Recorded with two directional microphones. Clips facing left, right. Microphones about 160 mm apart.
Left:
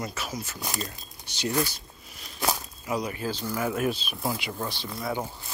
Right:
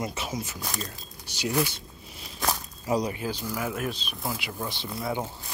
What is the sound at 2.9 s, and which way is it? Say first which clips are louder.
Speech: right 3 dB; 35° right (ahead or behind).